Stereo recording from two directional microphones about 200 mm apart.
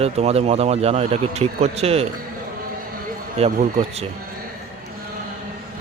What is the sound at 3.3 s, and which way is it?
Speech, 30° right (ahead or behind).